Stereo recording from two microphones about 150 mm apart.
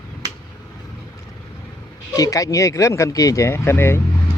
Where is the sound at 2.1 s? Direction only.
25° left (ahead or behind).